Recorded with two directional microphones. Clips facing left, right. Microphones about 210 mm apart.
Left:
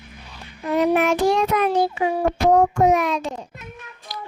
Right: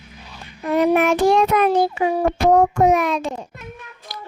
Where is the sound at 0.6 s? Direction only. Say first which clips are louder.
Right 2 dB; 55° right (ahead or behind).